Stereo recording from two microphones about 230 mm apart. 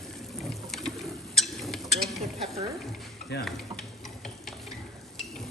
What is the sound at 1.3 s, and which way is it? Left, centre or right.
Rodents, centre.